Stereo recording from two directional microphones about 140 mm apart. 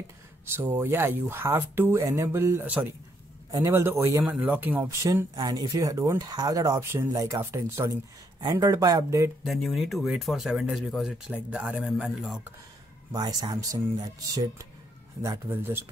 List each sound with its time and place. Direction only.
0.6 s speech: 15° right (ahead or behind)
9.4 s speech: centre (ahead or behind)
13.1 s speech: 30° right (ahead or behind)
15.2 s speech: 15° right (ahead or behind)